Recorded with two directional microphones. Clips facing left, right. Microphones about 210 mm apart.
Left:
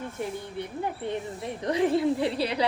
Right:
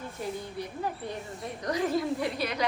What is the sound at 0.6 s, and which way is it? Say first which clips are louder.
A woman's voice: left 4 dB; 25° left (ahead or behind).